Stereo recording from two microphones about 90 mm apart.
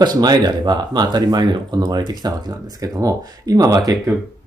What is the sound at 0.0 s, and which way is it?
Speech, 50° right (ahead or behind).